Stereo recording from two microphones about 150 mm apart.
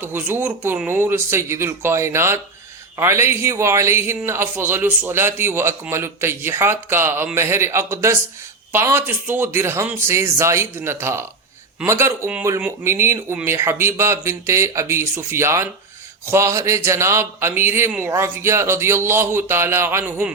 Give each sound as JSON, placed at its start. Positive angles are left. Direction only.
{"t": 0.0, "sound": "a man's voice", "side_deg": -15}